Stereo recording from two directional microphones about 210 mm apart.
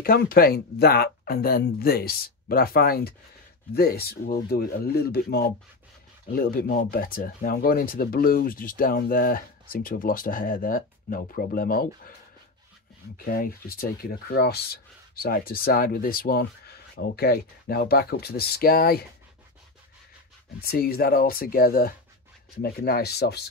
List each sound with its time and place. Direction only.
0.0 s speech: 45° left (ahead or behind)
13.2 s speech: 40° left (ahead or behind)
20.6 s speech: 45° left (ahead or behind)